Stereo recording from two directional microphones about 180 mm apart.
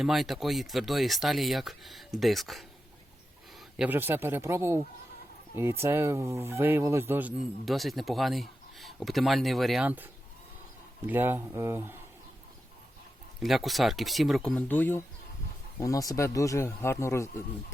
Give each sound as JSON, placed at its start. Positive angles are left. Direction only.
{"t": 0.0, "sound": "speech", "side_deg": 0}
{"t": 3.8, "sound": "speech", "side_deg": -10}
{"t": 13.4, "sound": "speech", "side_deg": 0}